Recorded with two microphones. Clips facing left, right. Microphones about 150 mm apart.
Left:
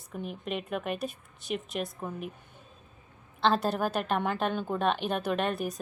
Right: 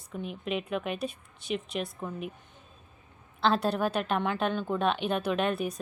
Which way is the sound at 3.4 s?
Centre (ahead or behind).